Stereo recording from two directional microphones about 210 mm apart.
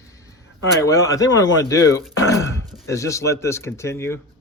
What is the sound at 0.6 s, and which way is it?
Speech, 15° left (ahead or behind).